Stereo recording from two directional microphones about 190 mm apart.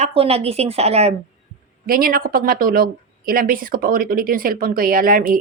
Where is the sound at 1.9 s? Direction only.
50° right (ahead or behind).